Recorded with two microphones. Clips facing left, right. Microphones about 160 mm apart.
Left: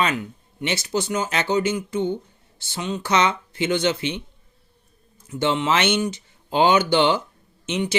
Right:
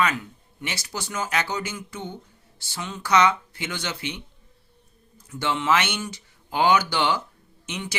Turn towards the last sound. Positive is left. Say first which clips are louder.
# left 9 dB
turn(degrees=25)  # may be behind; listen again after turning